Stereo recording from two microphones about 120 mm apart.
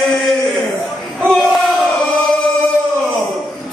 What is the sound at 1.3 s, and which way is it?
Battle cry, centre (ahead or behind).